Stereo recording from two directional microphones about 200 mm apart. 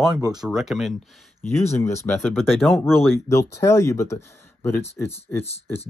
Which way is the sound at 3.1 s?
15° left (ahead or behind).